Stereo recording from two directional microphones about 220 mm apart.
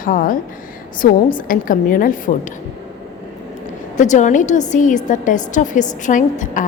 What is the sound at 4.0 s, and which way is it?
A woman's voice, 35° left (ahead or behind).